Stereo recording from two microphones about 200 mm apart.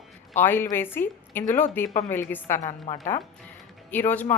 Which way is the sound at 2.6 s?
35° left (ahead or behind).